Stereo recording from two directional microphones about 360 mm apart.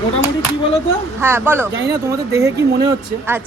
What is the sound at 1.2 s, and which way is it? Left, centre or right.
Speech, centre.